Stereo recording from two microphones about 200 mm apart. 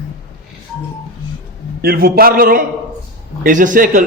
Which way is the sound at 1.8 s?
50° right (ahead or behind).